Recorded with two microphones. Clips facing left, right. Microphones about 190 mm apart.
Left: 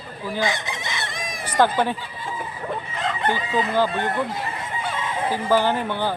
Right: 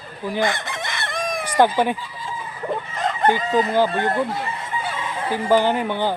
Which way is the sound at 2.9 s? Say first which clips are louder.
Right 5 dB; 45° right (ahead or behind).